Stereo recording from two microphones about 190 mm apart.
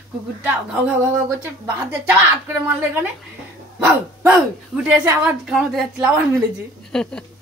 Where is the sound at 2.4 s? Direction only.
10° right (ahead or behind).